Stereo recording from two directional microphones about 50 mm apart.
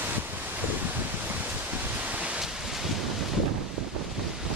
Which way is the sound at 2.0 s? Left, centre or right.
Right.